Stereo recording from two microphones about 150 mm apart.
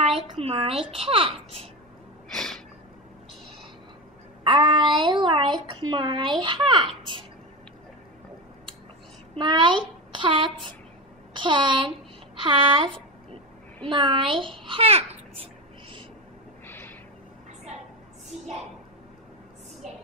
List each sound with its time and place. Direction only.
0.4 s child singing: 40° right (ahead or behind)
2.3 s a sound: 5° left (ahead or behind)
4.5 s child singing: 35° right (ahead or behind)
9.3 s child singing: 30° right (ahead or behind)
10.1 s a sound: 35° right (ahead or behind)
11.3 s child singing: 30° right (ahead or behind)
16.6 s snort: 15° left (ahead or behind)